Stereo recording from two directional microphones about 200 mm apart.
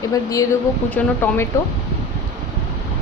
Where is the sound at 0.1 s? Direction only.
15° left (ahead or behind).